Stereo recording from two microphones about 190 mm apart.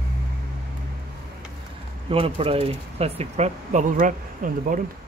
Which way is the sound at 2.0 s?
30° right (ahead or behind).